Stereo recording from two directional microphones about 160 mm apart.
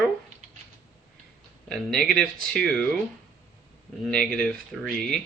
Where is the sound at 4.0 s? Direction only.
5° left (ahead or behind).